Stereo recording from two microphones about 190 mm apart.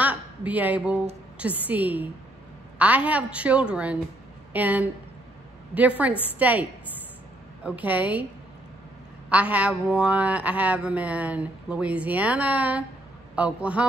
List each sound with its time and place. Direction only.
0.0 s a woman's voice: 10° right (ahead or behind)
7.6 s speech: 10° right (ahead or behind)
9.3 s speech: 5° right (ahead or behind)